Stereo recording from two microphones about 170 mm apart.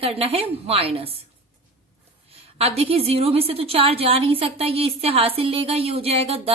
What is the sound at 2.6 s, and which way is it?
A woman's voice, 35° right (ahead or behind).